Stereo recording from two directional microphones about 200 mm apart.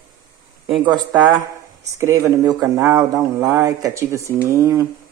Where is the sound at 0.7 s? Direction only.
20° right (ahead or behind).